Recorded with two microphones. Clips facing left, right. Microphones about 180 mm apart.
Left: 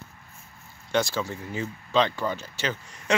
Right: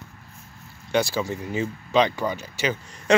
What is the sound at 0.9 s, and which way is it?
Speech, 10° right (ahead or behind).